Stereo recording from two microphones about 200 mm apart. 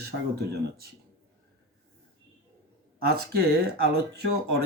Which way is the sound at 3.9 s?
50° right (ahead or behind).